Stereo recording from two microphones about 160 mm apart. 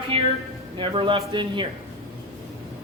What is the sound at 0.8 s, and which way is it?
Speech, 35° right (ahead or behind).